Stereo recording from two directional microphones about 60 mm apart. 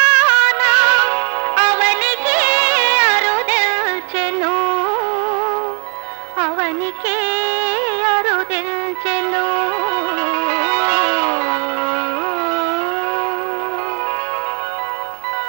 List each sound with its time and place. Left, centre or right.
0.0 s music: right
6.4 s music: right